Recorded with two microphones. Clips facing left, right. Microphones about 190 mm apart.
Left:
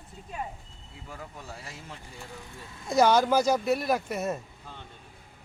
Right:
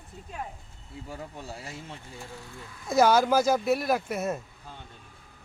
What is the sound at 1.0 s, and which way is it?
Speech, 30° right (ahead or behind).